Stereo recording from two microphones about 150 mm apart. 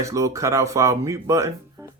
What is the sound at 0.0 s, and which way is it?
Speech, 20° right (ahead or behind).